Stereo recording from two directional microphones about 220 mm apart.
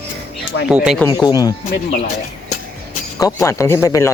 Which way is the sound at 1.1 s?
15° left (ahead or behind).